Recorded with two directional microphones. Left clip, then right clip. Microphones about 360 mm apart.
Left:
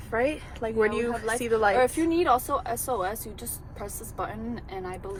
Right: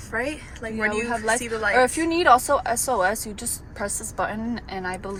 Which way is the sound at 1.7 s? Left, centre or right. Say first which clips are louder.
Right 3 dB; right.